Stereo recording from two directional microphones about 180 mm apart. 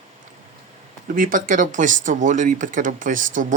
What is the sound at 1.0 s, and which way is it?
Speech, 50° right (ahead or behind).